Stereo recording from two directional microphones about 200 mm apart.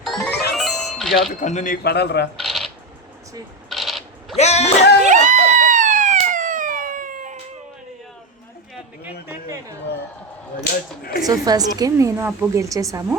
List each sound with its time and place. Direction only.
0.0 s music: centre (ahead or behind)
1.3 s a man's voice: 40° left (ahead or behind); by 2.3 s 55° left (ahead or behind)
2.4 s coin: centre (ahead or behind)
3.7 s coin: centre (ahead or behind)
4.4 s speech: 35° left (ahead or behind)
5.0 s a sound: 35° right (ahead or behind)
9.2 s chatter: 15° right (ahead or behind)
10.6 s a sound: 50° left (ahead or behind)
11.3 s a woman's voice: 20° right (ahead or behind)